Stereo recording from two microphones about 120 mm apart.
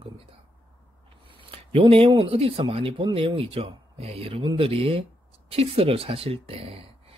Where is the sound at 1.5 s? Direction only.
55° right (ahead or behind).